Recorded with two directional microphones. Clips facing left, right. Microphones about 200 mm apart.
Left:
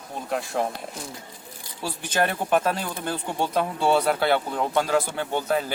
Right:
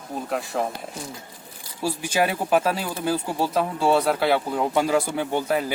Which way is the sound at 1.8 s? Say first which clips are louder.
Right 2 dB; 10° right (ahead or behind).